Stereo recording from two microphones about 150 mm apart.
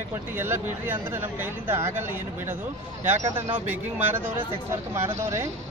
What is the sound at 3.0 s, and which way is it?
Speech, 10° right (ahead or behind).